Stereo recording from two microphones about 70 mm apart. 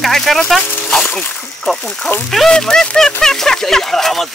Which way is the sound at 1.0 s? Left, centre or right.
Left.